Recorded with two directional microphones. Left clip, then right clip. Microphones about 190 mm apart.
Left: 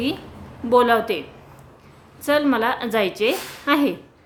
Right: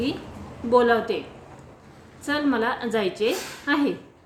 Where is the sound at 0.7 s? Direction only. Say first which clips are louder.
Left 3 dB; 30° left (ahead or behind).